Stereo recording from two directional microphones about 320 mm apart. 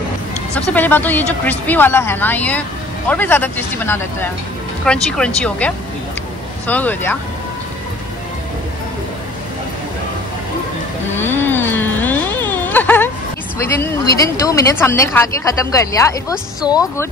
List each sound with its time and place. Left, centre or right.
0.7 s speech: centre
6.7 s speech: centre
11.1 s a sound: centre
13.7 s speech: centre